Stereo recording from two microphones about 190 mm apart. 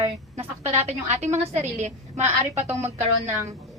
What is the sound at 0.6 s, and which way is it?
A woman's voice, 35° right (ahead or behind).